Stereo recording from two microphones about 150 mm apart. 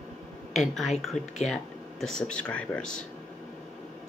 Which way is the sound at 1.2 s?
50° left (ahead or behind).